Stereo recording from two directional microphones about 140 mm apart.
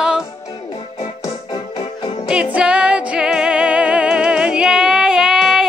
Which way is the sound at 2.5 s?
5° right (ahead or behind).